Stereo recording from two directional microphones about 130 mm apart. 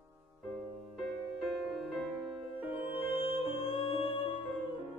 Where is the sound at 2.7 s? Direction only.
45° left (ahead or behind).